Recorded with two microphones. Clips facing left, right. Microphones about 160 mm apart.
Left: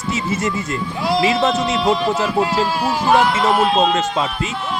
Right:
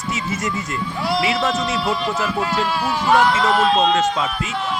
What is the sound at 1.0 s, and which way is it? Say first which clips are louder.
Speech: left 4 dB; 25° left (ahead or behind).